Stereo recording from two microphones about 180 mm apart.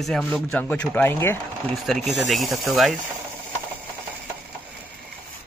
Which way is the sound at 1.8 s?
Centre (ahead or behind).